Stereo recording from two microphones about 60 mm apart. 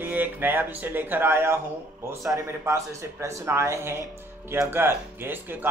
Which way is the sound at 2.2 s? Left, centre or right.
Right.